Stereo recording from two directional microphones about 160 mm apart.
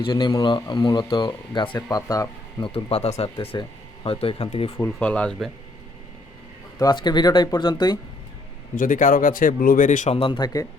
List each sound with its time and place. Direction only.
0.0 s speech: 30° left (ahead or behind)
2.6 s speech: 35° left (ahead or behind)
4.8 s speech: 10° left (ahead or behind)
6.7 s speech: 25° left (ahead or behind)
8.7 s speech: 55° left (ahead or behind)
10.2 s speech: 30° left (ahead or behind)